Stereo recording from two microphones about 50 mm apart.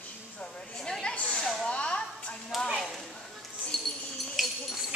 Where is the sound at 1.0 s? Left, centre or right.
Left.